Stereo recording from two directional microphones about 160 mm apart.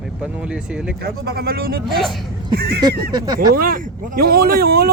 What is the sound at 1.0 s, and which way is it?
Speech, 75° right (ahead or behind).